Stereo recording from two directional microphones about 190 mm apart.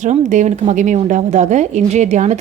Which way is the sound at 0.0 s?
40° right (ahead or behind).